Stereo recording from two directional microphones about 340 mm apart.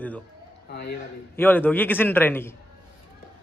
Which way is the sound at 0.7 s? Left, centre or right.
Left.